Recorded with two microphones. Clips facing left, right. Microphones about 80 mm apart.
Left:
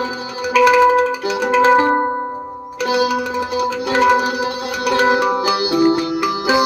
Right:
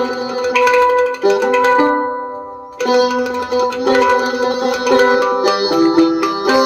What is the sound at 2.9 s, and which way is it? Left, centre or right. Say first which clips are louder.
Music: right 4 dB; right.